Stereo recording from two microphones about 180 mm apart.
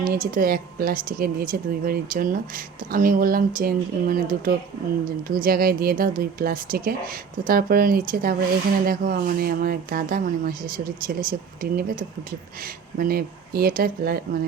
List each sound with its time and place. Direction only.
0.0 s a woman's voice: 50° right (ahead or behind)